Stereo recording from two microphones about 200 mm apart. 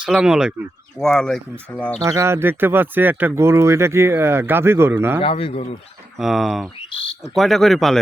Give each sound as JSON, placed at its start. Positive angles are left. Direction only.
{"t": 0.0, "sound": "speech", "side_deg": -5}
{"t": 2.0, "sound": "speech", "side_deg": -15}
{"t": 5.2, "sound": "speech", "side_deg": 25}
{"t": 6.1, "sound": "speech", "side_deg": 0}